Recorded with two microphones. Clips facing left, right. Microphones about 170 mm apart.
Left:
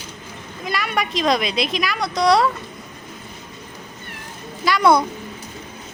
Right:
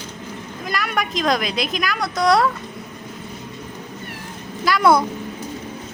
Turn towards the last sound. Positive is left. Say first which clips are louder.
# even
turn(degrees=0)  # may be behind; listen again after turning